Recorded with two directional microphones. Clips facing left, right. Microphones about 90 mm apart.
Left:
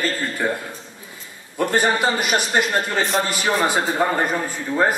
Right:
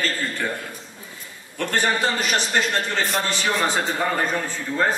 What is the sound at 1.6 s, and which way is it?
A man's voice, 15° left (ahead or behind).